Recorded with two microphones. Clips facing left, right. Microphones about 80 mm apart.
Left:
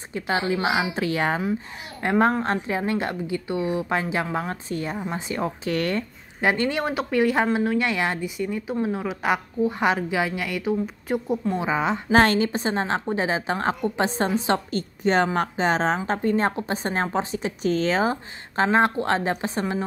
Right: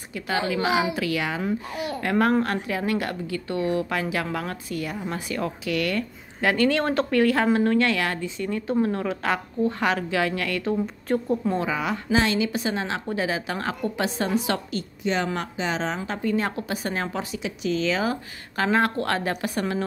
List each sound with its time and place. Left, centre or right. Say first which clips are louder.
0.1 s a woman's voice: left 2 dB; left
5.7 s a woman's voice: even; left; by 11.3 s centre
11.5 s a woman's voice: left 2 dB; left
12.1 s speech: left 4 dB; left
12.5 s a woman's voice: left 3 dB; left